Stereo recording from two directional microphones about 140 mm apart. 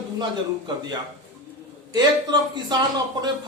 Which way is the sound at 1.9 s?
30° right (ahead or behind).